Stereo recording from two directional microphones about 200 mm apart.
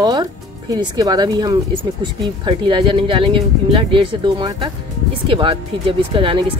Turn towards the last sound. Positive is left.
turn(degrees=-25)  # may be behind; listen again after turning